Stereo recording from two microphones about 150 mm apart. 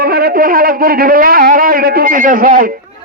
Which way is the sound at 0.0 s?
90° right.